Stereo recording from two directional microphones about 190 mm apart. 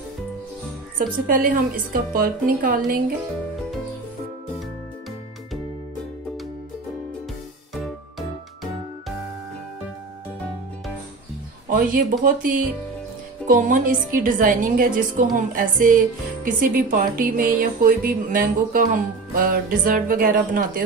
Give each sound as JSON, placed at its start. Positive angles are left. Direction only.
{"t": 0.9, "sound": "speech", "side_deg": -50}
{"t": 7.7, "sound": "music", "side_deg": 0}
{"t": 11.7, "sound": "speech", "side_deg": -50}